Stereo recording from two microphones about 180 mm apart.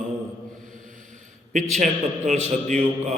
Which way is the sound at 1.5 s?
40° right (ahead or behind).